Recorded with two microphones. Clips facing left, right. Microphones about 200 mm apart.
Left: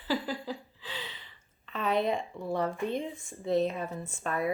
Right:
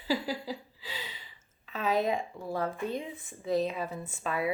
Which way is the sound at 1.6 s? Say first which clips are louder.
Even; 5° right (ahead or behind).